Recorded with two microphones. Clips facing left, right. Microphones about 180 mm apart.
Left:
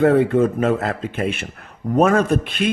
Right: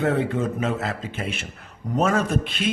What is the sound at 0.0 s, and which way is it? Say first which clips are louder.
A man's voice: left 8 dB; 55° left (ahead or behind).